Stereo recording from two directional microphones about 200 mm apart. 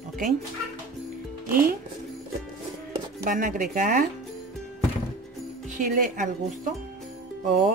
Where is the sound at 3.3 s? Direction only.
40° right (ahead or behind).